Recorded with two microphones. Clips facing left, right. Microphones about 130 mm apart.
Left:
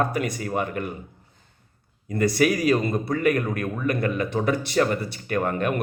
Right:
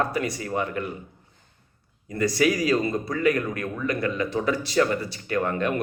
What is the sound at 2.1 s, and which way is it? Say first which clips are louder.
A man's voice: left 1 dB; 55° left (ahead or behind).